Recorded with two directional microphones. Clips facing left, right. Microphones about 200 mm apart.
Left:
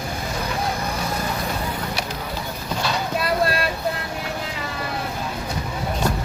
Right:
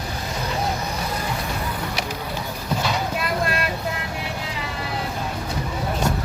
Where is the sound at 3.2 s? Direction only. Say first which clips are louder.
Left 3 dB; 35° left (ahead or behind).